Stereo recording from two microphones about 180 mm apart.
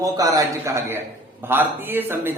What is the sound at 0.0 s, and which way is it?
A man's voice, 20° right (ahead or behind).